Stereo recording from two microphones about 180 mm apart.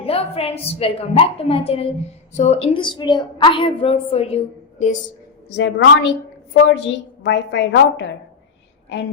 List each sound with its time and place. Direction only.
0.0 s a woman's voice: 35° left (ahead or behind)
5.5 s a woman's voice: 85° left